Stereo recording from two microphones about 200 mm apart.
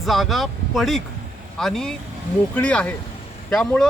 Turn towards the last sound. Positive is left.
turn(degrees=5)  # may be behind; listen again after turning